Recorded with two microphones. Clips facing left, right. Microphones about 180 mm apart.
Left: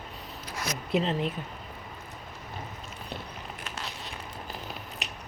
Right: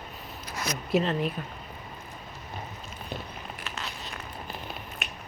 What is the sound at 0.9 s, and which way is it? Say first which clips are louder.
Speech: right 2 dB; 25° left (ahead or behind).